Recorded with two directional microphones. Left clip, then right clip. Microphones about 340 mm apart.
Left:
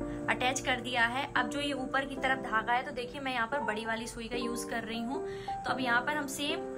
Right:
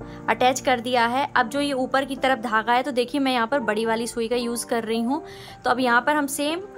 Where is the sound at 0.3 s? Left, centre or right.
Centre.